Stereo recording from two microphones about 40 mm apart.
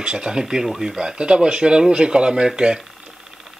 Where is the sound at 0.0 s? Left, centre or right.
Centre.